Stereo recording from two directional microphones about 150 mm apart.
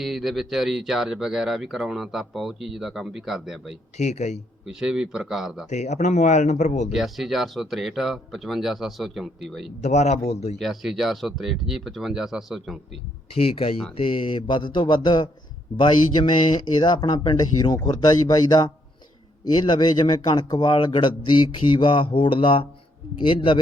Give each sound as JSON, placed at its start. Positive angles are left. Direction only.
{"t": 0.0, "sound": "speech", "side_deg": 0}
{"t": 3.9, "sound": "speech", "side_deg": 50}
{"t": 4.6, "sound": "speech", "side_deg": -5}
{"t": 5.6, "sound": "speech", "side_deg": 50}
{"t": 6.9, "sound": "speech", "side_deg": 0}
{"t": 9.8, "sound": "speech", "side_deg": 45}
{"t": 10.6, "sound": "speech", "side_deg": 0}
{"t": 13.3, "sound": "speech", "side_deg": 40}